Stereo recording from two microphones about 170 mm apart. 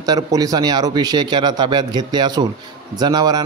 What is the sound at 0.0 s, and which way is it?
A man's voice, 20° right (ahead or behind).